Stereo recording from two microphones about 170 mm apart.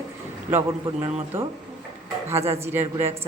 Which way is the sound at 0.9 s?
30° right (ahead or behind).